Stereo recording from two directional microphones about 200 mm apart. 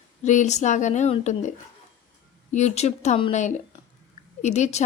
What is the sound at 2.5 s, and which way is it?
A woman's voice, 35° left (ahead or behind).